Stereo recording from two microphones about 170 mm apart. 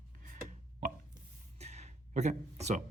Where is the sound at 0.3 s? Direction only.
50° right (ahead or behind).